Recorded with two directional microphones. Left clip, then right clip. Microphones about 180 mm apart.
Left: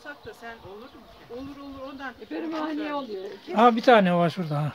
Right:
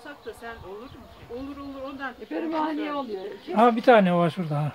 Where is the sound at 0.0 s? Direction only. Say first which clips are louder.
Right 1 dB; centre (ahead or behind).